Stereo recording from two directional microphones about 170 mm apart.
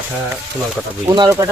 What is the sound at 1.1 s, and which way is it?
Speech, 20° right (ahead or behind).